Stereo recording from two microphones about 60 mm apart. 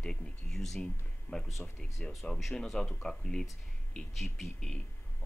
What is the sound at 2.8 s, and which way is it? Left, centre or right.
Speech, centre.